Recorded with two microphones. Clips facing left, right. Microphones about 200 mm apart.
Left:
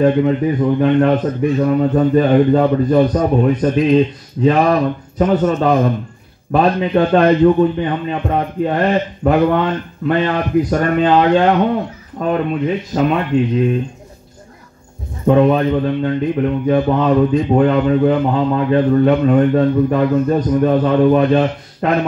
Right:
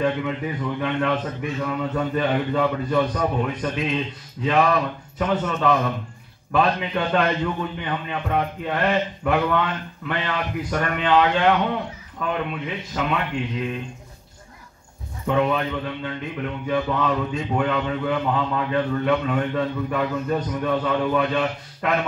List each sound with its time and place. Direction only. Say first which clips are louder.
0.0 s a man's voice: left 10 dB; 35° left (ahead or behind)
15.2 s a man's voice: left 10 dB; 40° left (ahead or behind)